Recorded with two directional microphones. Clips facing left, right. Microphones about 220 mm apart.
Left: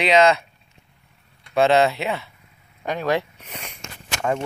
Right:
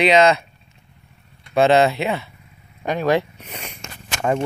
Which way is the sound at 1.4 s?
Centre (ahead or behind).